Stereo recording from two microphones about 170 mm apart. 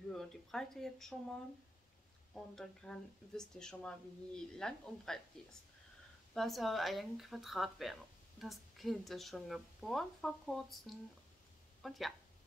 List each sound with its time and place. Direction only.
0.1 s a woman's voice: centre (ahead or behind)
2.3 s a woman's voice: 5° left (ahead or behind)
6.3 s a woman's voice: centre (ahead or behind)